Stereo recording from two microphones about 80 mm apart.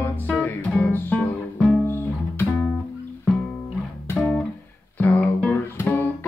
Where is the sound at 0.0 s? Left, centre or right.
Left.